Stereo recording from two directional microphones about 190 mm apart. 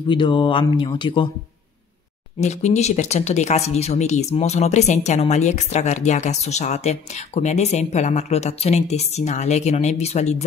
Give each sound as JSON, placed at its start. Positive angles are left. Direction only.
{"t": 0.1, "sound": "speech", "side_deg": 25}
{"t": 2.4, "sound": "speech", "side_deg": 35}